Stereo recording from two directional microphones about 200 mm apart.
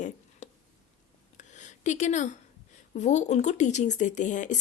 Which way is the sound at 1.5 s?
35° left (ahead or behind).